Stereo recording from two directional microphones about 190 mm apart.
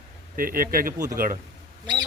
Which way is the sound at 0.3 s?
50° right (ahead or behind).